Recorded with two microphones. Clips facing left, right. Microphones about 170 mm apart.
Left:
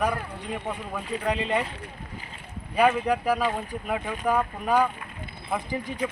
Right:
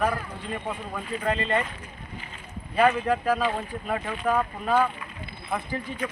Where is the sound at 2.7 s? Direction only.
15° left (ahead or behind).